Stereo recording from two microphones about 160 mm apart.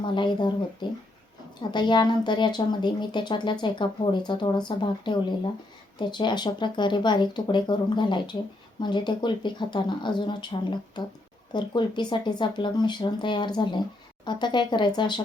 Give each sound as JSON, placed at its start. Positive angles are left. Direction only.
{"t": 0.0, "sound": "speech", "side_deg": 30}